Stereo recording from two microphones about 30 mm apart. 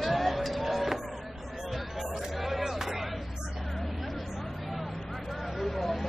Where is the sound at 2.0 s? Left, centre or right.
Centre.